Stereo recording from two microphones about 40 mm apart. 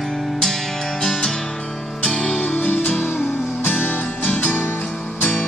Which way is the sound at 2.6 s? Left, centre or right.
Left.